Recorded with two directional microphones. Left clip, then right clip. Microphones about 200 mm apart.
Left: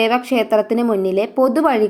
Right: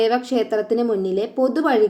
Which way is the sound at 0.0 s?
25° left (ahead or behind).